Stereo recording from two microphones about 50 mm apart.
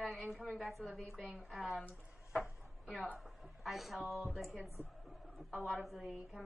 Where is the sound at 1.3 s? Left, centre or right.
Centre.